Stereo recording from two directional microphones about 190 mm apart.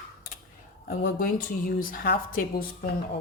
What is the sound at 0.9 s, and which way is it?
Speech, 50° left (ahead or behind).